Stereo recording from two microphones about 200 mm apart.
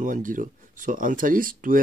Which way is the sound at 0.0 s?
40° right (ahead or behind).